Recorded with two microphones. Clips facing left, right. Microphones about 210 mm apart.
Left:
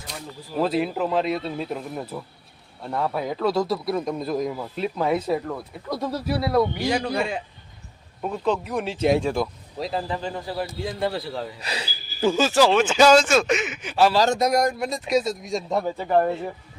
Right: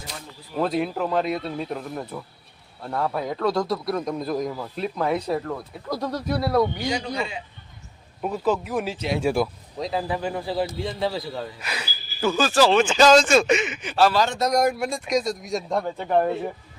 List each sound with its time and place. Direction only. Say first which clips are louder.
0.6 s speech: left 1 dB; centre (ahead or behind)
6.9 s a man's voice: left 3 dB; 50° left (ahead or behind)
8.2 s speech: right 1 dB; 5° right (ahead or behind)
11.6 s speech: left 2 dB; 30° left (ahead or behind)
12.5 s speech: right 1 dB; 10° left (ahead or behind)
14.1 s speech: left 3 dB; 35° left (ahead or behind)
14.3 s speech: left 1 dB; 10° left (ahead or behind)
14.6 s speech: right 1 dB; 5° right (ahead or behind)